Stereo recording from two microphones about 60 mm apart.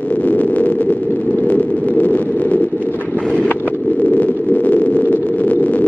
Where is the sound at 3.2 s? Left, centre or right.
Centre.